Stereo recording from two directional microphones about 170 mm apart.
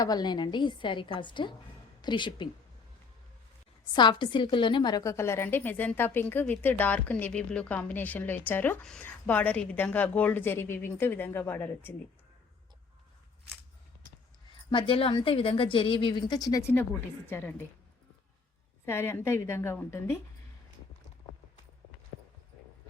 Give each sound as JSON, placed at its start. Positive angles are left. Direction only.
{"t": 0.0, "sound": "a woman's voice", "side_deg": 25}
{"t": 3.9, "sound": "a woman's voice", "side_deg": 25}
{"t": 14.7, "sound": "a woman's voice", "side_deg": 30}
{"t": 18.9, "sound": "a woman's voice", "side_deg": 15}